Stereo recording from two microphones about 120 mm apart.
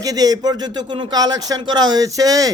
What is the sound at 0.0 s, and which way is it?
Speech, 30° right (ahead or behind).